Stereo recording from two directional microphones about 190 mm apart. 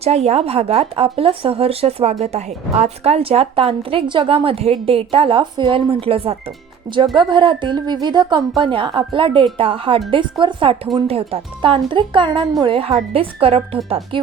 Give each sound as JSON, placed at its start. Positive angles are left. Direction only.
{"t": 0.0, "sound": "a woman's voice", "side_deg": -35}
{"t": 6.9, "sound": "a woman's voice", "side_deg": -20}